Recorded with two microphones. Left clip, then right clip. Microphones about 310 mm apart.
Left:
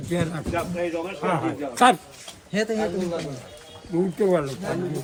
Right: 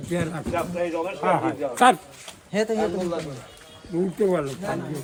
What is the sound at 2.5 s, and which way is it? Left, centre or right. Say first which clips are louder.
Speech: right 1 dB; centre.